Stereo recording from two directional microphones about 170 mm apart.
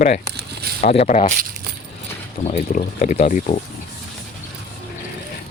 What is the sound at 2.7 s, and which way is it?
Speech, 50° left (ahead or behind).